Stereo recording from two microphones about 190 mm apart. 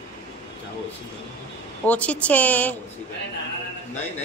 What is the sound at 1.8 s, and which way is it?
Speech, 5° left (ahead or behind).